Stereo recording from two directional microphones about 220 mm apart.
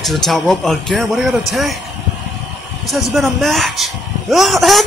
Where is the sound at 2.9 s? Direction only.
Centre (ahead or behind).